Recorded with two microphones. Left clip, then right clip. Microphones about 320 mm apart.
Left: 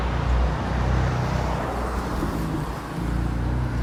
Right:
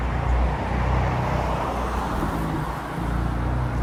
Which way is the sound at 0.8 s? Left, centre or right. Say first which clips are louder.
Right 2 dB; right.